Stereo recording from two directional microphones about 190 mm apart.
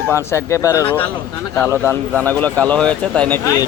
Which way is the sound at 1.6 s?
10° right (ahead or behind).